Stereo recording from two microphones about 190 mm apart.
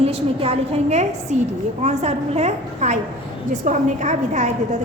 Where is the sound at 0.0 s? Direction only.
30° right (ahead or behind).